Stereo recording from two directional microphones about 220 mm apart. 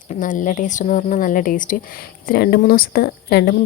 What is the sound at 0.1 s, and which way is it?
Speech, 35° left (ahead or behind).